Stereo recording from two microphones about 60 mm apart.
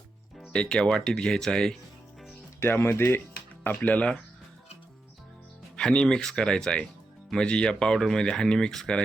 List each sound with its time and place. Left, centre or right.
0.5 s speech: centre
2.6 s speech: left
3.8 s speech: left
5.7 s speech: centre